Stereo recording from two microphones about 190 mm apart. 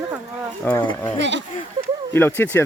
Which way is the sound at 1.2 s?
70° right (ahead or behind).